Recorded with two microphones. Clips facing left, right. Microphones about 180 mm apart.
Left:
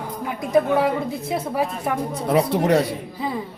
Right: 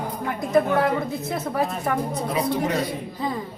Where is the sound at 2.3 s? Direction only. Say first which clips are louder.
Left 8 dB; 75° left (ahead or behind).